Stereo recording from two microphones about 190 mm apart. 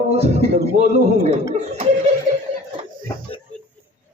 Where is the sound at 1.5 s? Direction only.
40° right (ahead or behind).